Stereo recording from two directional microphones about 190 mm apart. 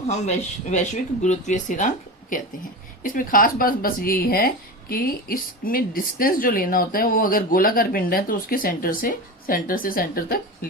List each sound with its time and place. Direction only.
0.1 s speech: 35° left (ahead or behind)
3.0 s speech: 45° left (ahead or behind)